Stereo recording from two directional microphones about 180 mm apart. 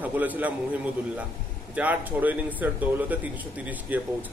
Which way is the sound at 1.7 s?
10° right (ahead or behind).